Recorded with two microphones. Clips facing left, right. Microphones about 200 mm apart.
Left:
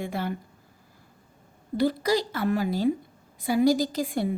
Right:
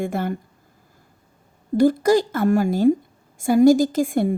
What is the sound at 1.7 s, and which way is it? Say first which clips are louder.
A woman's voice: right 8 dB; 45° right (ahead or behind).